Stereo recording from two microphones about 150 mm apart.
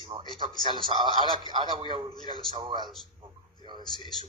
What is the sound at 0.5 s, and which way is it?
Speech, 30° left (ahead or behind).